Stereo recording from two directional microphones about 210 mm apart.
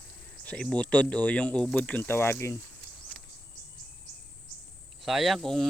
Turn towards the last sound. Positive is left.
turn(degrees=0)  # may be behind; listen again after turning